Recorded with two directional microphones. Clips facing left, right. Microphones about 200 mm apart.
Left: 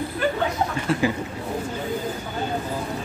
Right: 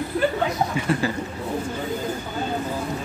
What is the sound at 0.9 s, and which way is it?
Speech, centre (ahead or behind).